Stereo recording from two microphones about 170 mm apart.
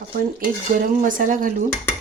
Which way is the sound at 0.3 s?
55° right (ahead or behind).